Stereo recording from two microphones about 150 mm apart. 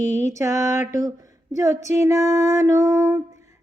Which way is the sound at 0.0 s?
50° left (ahead or behind).